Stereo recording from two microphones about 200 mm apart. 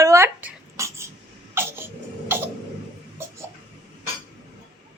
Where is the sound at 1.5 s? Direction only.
10° right (ahead or behind).